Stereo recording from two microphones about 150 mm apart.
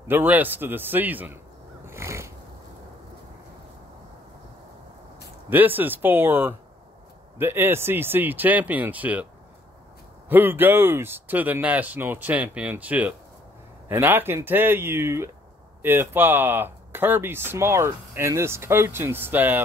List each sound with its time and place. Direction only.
0.1 s speech: 10° right (ahead or behind)
1.9 s a sound: 20° right (ahead or behind)
5.5 s speech: 10° right (ahead or behind)